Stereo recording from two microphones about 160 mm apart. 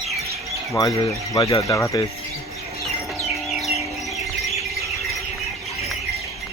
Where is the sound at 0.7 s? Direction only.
25° left (ahead or behind).